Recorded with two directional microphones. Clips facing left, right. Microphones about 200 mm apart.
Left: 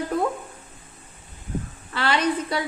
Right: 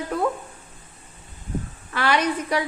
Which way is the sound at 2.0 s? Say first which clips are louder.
Even; 10° right (ahead or behind).